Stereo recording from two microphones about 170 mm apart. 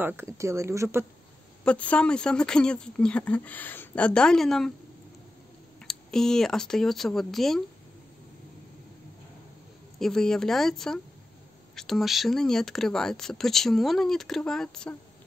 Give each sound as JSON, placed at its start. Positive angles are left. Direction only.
{"t": 0.0, "sound": "speech", "side_deg": -15}
{"t": 1.6, "sound": "speech", "side_deg": 5}
{"t": 5.9, "sound": "speech", "side_deg": 5}
{"t": 9.9, "sound": "speech", "side_deg": 5}